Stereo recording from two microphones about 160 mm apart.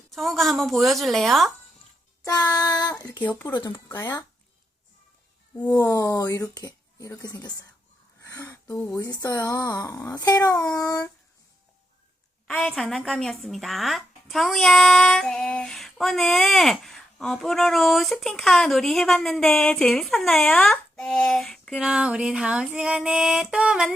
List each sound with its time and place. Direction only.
0.1 s speech: centre (ahead or behind)
2.5 s speech: 20° left (ahead or behind)
5.7 s speech: 20° left (ahead or behind)
8.2 s a sound: 20° left (ahead or behind)
9.0 s speech: 25° left (ahead or behind)
12.5 s speech: 5° left (ahead or behind)